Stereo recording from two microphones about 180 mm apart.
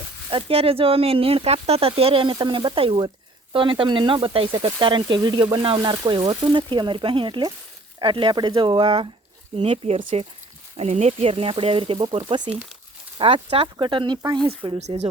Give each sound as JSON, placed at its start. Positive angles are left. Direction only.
{"t": 0.3, "sound": "speech", "side_deg": -30}